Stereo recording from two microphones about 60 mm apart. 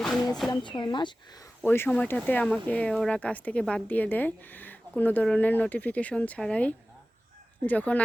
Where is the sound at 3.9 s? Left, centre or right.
Left.